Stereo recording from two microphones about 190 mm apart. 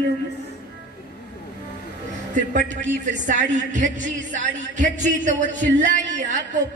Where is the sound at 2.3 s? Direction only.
40° right (ahead or behind).